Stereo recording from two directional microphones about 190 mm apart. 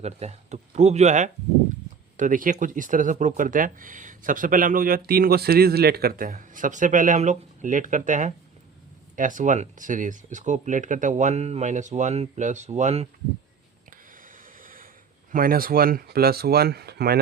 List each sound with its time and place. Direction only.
0.0 s speech: 35° right (ahead or behind)
14.6 s a sound: 45° right (ahead or behind)
15.3 s speech: 50° right (ahead or behind)